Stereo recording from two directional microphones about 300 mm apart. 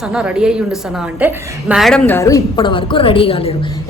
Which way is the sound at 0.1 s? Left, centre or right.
Centre.